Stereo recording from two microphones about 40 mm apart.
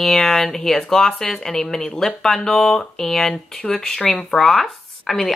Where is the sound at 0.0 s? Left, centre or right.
Centre.